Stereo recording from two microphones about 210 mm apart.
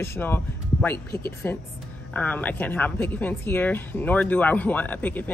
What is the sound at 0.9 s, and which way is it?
Speech, 50° left (ahead or behind).